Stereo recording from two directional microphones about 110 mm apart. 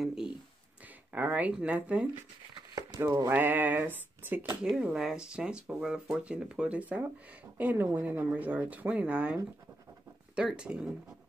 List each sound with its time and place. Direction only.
0.0 s a sound: 5° right (ahead or behind)
1.1 s speech: 15° right (ahead or behind)
3.3 s speech: 15° right (ahead or behind)